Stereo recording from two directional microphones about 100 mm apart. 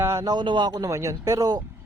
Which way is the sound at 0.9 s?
30° right (ahead or behind).